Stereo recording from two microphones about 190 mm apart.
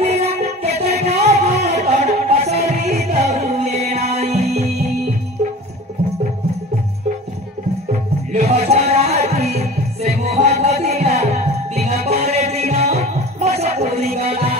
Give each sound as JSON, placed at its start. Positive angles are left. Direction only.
{"t": 0.0, "sound": "music", "side_deg": -35}
{"t": 8.3, "sound": "music", "side_deg": -35}